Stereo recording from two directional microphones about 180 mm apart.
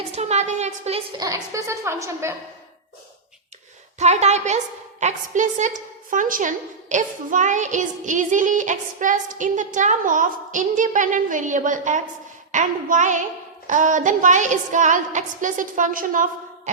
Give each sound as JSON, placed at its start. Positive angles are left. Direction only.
{"t": 0.2, "sound": "a woman's voice", "side_deg": -40}
{"t": 1.2, "sound": "a woman's voice", "side_deg": -20}
{"t": 3.9, "sound": "a woman's voice", "side_deg": -40}